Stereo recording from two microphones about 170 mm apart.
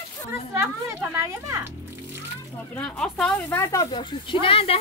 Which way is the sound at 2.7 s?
5° left (ahead or behind).